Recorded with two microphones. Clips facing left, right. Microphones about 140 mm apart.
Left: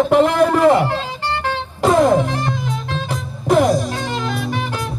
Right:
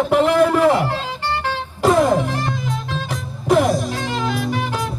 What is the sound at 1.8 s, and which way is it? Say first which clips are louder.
Music: left 2 dB; centre (ahead or behind).